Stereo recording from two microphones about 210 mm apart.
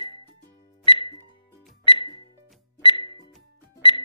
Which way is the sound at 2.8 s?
25° left (ahead or behind).